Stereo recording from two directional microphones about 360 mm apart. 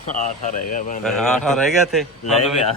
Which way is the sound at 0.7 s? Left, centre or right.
Left.